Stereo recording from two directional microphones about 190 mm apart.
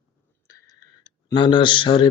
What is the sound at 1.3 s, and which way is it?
Speech, 25° left (ahead or behind).